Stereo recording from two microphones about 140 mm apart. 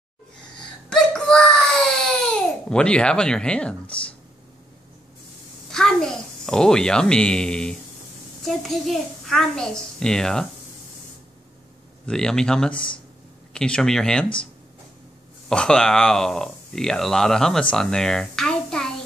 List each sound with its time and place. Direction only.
0.8 s wail: 5° left (ahead or behind)
2.3 s a child's voice: 5° left (ahead or behind)
5.7 s a child's voice: 5° left (ahead or behind)
12.1 s a child's voice: 5° left (ahead or behind)
12.7 s speech: 35° left (ahead or behind)
13.5 s a child's voice: 5° left (ahead or behind)